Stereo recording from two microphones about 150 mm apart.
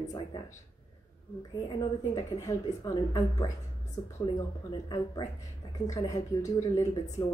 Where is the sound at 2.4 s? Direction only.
25° left (ahead or behind).